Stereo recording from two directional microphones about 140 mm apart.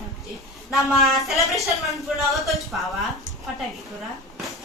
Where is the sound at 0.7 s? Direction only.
Centre (ahead or behind).